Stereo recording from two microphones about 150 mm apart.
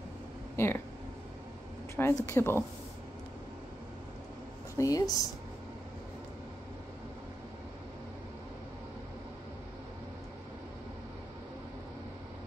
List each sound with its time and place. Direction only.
0.6 s speech: 15° left (ahead or behind)
2.0 s speech: 15° left (ahead or behind)
4.7 s speech: 25° left (ahead or behind)